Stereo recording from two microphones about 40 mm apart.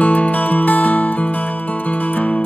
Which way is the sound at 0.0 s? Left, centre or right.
Left.